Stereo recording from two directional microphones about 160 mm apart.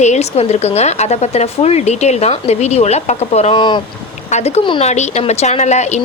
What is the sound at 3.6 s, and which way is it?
Speech, 30° left (ahead or behind).